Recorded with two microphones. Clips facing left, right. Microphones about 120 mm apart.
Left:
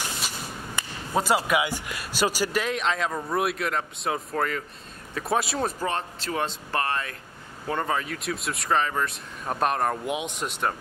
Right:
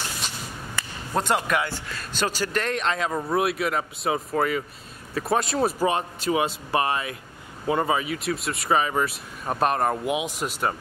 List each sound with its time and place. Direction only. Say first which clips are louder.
0.8 s a sound: right 1 dB; 15° left (ahead or behind)
1.1 s speech: left 1 dB; 5° left (ahead or behind)
5.7 s speech: right 5 dB; 10° right (ahead or behind)